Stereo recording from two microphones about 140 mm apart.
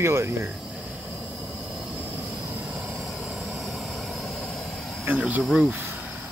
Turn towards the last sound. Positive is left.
turn(degrees=-5)  # may be behind; listen again after turning